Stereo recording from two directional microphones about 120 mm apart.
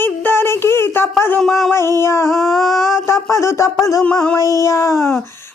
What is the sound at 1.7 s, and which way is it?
Speech, 20° left (ahead or behind).